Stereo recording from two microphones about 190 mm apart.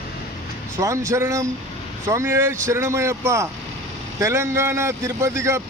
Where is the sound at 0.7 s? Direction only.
15° right (ahead or behind).